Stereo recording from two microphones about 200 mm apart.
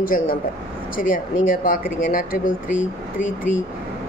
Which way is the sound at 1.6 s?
45° left (ahead or behind).